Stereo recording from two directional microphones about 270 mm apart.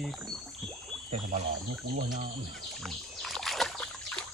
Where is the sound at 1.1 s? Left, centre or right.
Right.